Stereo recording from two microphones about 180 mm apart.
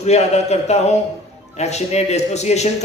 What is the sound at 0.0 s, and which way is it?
Speech, 40° left (ahead or behind).